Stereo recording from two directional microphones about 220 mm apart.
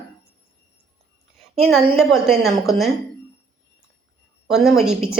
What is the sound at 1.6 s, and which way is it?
A woman's voice, centre (ahead or behind).